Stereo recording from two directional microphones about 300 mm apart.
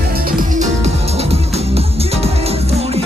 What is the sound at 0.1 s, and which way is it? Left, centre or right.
Music, right.